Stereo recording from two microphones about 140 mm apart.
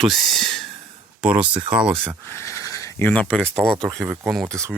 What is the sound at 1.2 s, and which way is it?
Speech, 10° right (ahead or behind).